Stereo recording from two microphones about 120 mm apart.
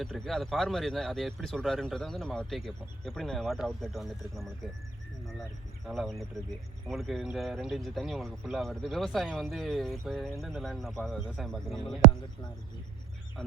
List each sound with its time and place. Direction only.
0.0 s speech: centre (ahead or behind)
5.8 s speech: centre (ahead or behind)